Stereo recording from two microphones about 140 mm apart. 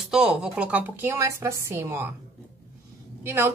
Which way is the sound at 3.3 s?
15° right (ahead or behind).